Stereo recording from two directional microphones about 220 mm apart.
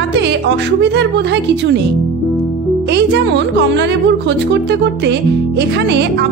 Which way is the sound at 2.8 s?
50° right (ahead or behind).